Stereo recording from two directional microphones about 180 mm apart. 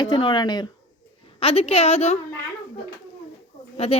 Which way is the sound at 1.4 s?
35° left (ahead or behind).